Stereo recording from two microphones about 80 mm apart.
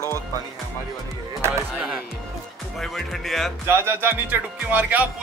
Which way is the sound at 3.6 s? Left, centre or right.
Right.